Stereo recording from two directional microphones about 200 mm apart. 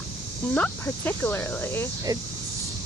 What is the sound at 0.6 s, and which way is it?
Speech, 10° left (ahead or behind).